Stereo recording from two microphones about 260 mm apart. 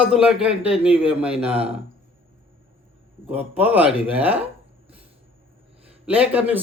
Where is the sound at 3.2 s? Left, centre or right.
Centre.